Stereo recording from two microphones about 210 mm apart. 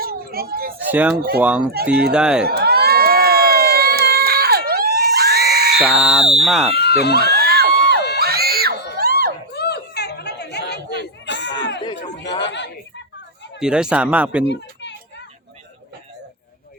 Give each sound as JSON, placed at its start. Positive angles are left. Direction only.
{"t": 0.0, "sound": "children playing", "side_deg": -45}
{"t": 0.9, "sound": "speech", "side_deg": -5}
{"t": 2.5, "sound": "crowd", "side_deg": -50}
{"t": 5.8, "sound": "speech", "side_deg": 0}
{"t": 6.7, "sound": "speech", "side_deg": 50}
{"t": 7.3, "sound": "crowd", "side_deg": -50}
{"t": 7.7, "sound": "crowd", "side_deg": 50}
{"t": 8.2, "sound": "music", "side_deg": -50}
{"t": 9.6, "sound": "chatter", "side_deg": 50}
{"t": 12.4, "sound": "chuckle", "side_deg": 55}
{"t": 13.6, "sound": "speech", "side_deg": -5}
{"t": 14.4, "sound": "a sound", "side_deg": 55}